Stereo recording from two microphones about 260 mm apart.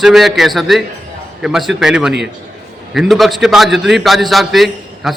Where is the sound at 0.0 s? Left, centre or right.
Centre.